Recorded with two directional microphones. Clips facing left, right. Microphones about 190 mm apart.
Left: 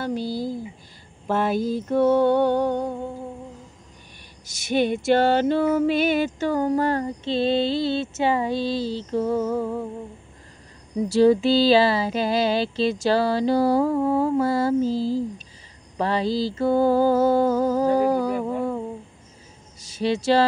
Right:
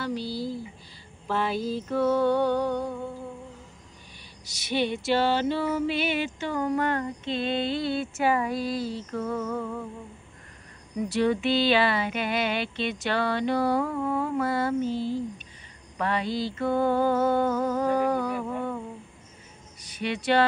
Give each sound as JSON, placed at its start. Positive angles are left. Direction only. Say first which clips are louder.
{"t": 0.0, "sound": "a sound", "louder": "left 4 dB", "side_deg": 50}
{"t": 4.5, "sound": "female singing", "louder": "left 5 dB", "side_deg": 50}
{"t": 11.1, "sound": "female singing", "louder": "left 7 dB", "side_deg": 30}
{"t": 20.0, "sound": "speech", "louder": "left 7 dB", "side_deg": 30}